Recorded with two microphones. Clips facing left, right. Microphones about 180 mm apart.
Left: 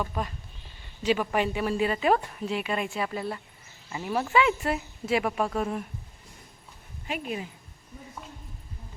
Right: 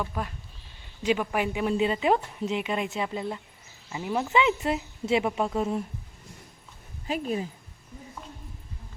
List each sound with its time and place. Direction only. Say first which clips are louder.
1.0 s a woman's voice: left 1 dB; 10° right (ahead or behind)
7.1 s a woman's voice: right 4 dB; 35° right (ahead or behind)